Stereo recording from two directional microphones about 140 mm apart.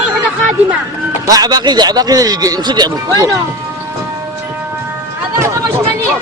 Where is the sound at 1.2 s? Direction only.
25° right (ahead or behind).